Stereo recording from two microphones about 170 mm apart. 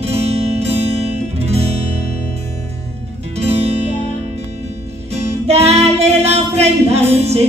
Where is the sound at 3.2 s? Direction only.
35° right (ahead or behind).